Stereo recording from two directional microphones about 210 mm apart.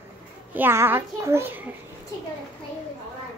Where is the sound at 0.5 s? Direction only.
10° right (ahead or behind).